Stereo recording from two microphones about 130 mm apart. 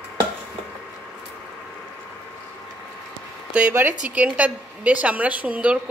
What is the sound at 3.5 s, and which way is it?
A woman's voice, 15° right (ahead or behind).